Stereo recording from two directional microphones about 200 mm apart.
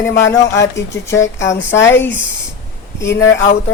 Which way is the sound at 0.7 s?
15° left (ahead or behind).